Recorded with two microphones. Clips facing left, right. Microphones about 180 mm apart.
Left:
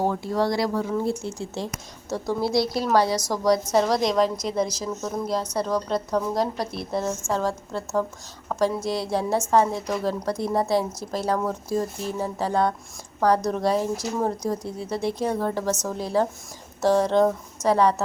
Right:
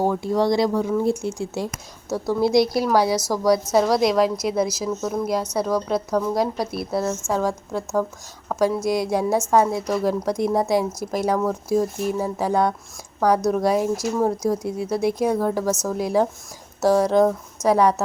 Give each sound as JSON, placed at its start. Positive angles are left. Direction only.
{"t": 0.0, "sound": "speech", "side_deg": -15}